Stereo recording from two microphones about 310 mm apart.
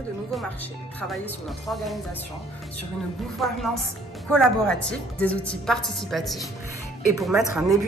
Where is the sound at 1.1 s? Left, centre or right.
Centre.